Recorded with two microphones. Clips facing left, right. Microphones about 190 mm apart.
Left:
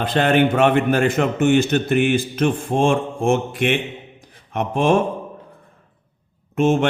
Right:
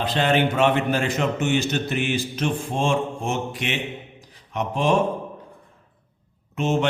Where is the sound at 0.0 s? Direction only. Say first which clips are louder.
Left 4 dB; 55° left (ahead or behind).